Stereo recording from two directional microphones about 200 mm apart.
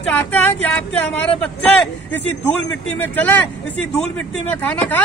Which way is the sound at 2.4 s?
10° left (ahead or behind).